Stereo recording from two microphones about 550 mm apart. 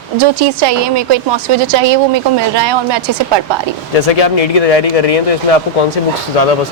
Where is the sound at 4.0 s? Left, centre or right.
Left.